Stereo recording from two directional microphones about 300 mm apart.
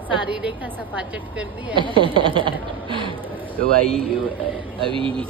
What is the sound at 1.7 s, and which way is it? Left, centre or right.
A man's voice, centre.